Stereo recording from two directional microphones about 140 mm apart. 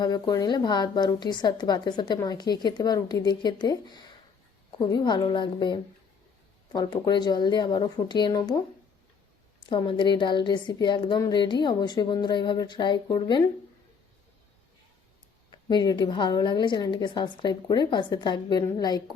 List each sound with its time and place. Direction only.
0.0 s a woman's voice: 30° left (ahead or behind)
9.6 s a woman's voice: 35° left (ahead or behind)
15.7 s a woman's voice: 30° left (ahead or behind)